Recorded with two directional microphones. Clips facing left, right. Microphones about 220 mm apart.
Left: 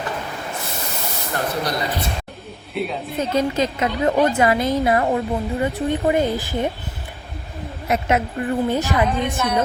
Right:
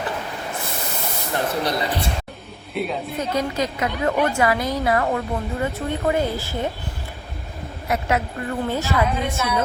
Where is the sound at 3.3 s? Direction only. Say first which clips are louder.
Left 4 dB; 25° left (ahead or behind).